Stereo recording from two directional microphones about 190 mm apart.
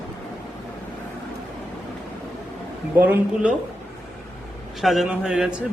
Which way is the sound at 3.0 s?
10° right (ahead or behind).